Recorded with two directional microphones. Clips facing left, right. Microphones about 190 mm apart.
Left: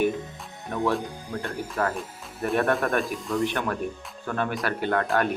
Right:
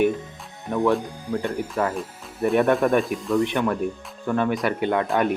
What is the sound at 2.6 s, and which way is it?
Speech, 15° right (ahead or behind).